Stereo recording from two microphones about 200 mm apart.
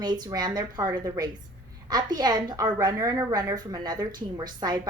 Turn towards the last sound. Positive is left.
turn(degrees=-20)  # may be behind; listen again after turning